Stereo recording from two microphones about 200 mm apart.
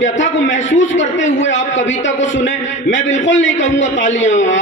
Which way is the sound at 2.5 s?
35° left (ahead or behind).